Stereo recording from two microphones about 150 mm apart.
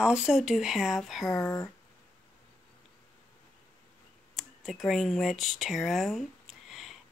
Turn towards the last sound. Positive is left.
turn(degrees=0)  # may be behind; listen again after turning